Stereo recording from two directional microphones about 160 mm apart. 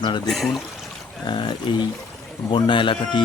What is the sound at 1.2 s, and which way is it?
Speech, 30° left (ahead or behind).